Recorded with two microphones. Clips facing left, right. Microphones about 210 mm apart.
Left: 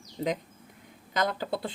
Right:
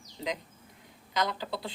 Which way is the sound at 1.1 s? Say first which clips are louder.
Left 3 dB; 50° left (ahead or behind).